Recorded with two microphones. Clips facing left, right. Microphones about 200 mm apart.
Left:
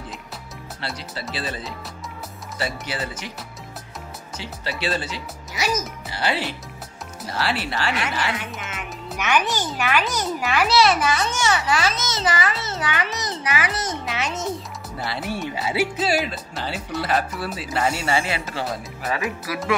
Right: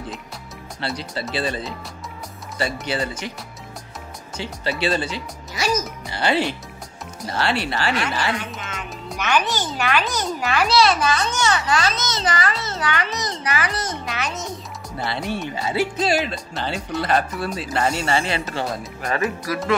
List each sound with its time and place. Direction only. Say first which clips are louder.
0.7 s speech: right 5 dB; 5° left (ahead or behind)
4.4 s a child's voice: right 5 dB; centre (ahead or behind)
13.8 s a child's voice: left 1 dB; 25° left (ahead or behind)
15.0 s speech: right 2 dB; 5° left (ahead or behind)